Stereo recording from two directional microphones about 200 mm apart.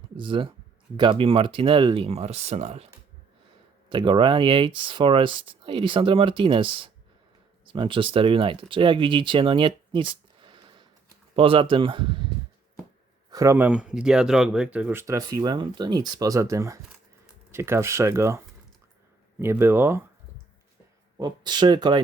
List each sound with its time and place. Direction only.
0.2 s speech: 25° right (ahead or behind)
3.8 s speech: 25° right (ahead or behind)
13.3 s speech: 15° right (ahead or behind)
21.2 s speech: 20° right (ahead or behind)